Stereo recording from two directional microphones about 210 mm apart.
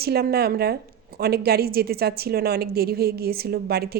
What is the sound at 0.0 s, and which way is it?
A woman's voice, 50° right (ahead or behind).